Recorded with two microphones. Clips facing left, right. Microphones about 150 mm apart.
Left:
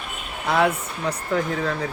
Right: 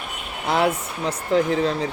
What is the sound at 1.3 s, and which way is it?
Speech, 25° right (ahead or behind).